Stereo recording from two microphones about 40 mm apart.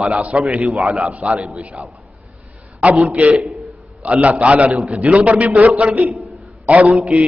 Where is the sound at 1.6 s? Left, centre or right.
Right.